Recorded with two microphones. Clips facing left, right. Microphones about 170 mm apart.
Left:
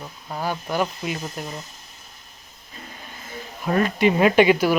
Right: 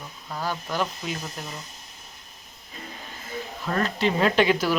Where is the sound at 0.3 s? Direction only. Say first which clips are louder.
Left 3 dB; 15° left (ahead or behind).